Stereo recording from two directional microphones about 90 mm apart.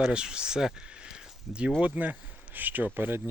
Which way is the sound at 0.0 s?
10° right (ahead or behind).